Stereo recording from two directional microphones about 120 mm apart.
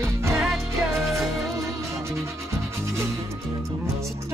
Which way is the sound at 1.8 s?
25° right (ahead or behind).